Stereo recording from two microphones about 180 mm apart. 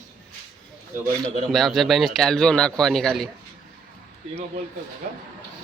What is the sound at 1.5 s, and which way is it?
A man's voice, centre (ahead or behind).